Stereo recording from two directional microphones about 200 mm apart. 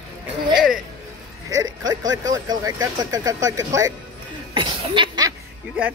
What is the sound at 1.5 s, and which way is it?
Speech, 20° right (ahead or behind).